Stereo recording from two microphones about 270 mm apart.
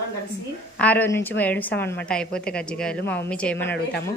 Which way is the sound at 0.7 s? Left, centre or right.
Centre.